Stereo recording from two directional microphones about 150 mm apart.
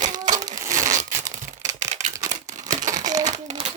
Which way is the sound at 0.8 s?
55° right (ahead or behind).